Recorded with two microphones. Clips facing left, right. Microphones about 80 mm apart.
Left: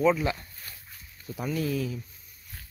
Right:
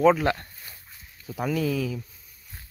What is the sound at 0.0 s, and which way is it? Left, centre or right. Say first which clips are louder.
Speech: right 4 dB; right.